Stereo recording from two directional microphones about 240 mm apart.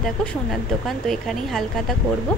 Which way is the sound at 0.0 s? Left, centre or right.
Centre.